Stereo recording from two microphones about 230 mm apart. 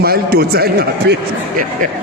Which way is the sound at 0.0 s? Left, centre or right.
Right.